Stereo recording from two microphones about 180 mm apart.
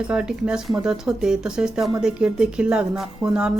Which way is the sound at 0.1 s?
5° right (ahead or behind).